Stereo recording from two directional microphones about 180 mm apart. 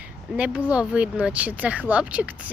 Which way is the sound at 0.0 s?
5° right (ahead or behind).